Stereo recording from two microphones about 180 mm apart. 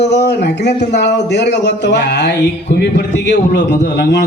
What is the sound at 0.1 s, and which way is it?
A man's voice, 70° left (ahead or behind).